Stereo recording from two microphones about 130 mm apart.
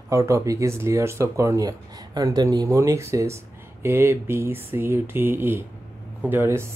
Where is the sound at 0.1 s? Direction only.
25° right (ahead or behind).